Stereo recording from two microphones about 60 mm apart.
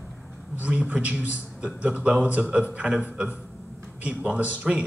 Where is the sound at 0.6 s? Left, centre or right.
Right.